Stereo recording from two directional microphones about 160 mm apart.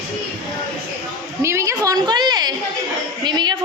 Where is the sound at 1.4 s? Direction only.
20° right (ahead or behind).